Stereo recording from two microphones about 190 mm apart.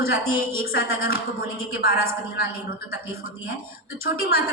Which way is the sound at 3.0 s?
90° left.